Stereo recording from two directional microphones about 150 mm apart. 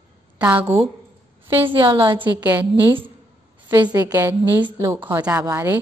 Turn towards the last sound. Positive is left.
turn(degrees=-15)  # may be behind; listen again after turning